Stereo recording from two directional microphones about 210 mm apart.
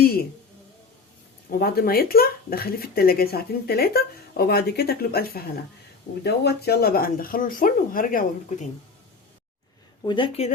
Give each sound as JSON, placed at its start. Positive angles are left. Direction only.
{"t": 0.0, "sound": "a sound", "side_deg": 45}
{"t": 1.5, "sound": "speech", "side_deg": 45}
{"t": 10.1, "sound": "speech", "side_deg": 25}